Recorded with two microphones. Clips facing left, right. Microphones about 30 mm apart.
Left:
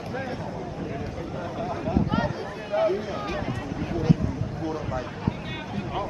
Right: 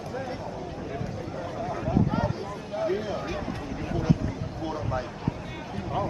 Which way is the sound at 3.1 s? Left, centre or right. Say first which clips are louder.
Left 1 dB; centre.